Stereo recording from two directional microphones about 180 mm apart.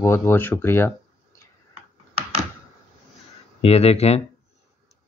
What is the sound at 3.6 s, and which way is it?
Speech, 35° left (ahead or behind).